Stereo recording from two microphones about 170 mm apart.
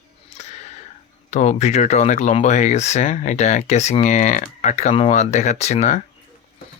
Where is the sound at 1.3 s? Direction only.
45° left (ahead or behind).